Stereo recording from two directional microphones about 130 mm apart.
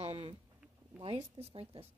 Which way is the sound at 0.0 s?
50° right (ahead or behind).